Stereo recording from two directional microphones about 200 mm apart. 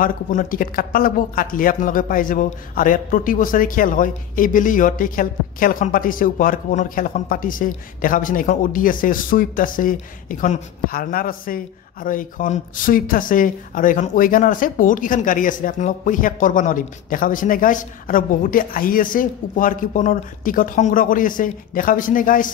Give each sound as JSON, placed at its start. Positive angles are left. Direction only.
{"t": 0.0, "sound": "speech", "side_deg": 45}